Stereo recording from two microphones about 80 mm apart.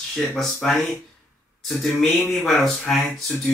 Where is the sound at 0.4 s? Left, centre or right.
Centre.